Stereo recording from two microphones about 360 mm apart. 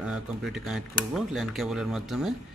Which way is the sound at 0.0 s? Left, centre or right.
Centre.